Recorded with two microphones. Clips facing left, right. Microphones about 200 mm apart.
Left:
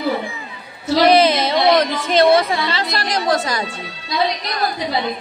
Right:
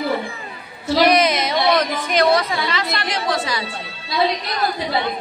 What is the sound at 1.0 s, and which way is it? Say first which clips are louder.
A woman's voice: left 4 dB; 30° left (ahead or behind).